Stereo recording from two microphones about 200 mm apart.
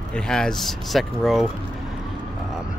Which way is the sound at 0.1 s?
5° left (ahead or behind).